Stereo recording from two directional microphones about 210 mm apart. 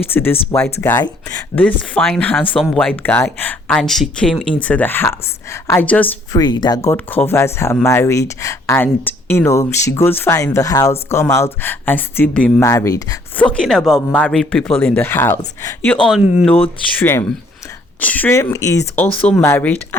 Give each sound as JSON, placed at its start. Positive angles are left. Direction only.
{"t": 0.1, "sound": "speech", "side_deg": 10}
{"t": 6.4, "sound": "speech", "side_deg": 20}
{"t": 13.5, "sound": "speech", "side_deg": 5}